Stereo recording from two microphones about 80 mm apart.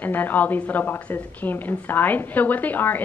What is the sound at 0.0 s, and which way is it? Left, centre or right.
A woman's voice, left.